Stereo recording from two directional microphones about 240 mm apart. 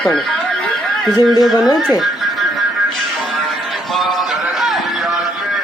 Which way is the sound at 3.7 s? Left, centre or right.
Centre.